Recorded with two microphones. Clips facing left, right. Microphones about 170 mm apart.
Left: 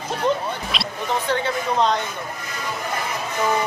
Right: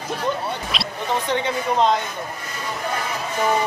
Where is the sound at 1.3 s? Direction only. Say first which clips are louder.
Even; 15° right (ahead or behind).